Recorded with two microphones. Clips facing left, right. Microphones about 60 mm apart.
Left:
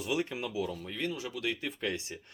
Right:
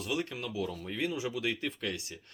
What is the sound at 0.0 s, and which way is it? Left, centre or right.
Speech, centre.